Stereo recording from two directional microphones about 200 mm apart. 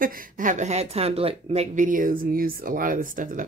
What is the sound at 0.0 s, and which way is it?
Speech, 45° right (ahead or behind).